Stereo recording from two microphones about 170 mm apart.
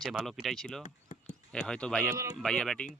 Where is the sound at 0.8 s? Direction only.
45° left (ahead or behind).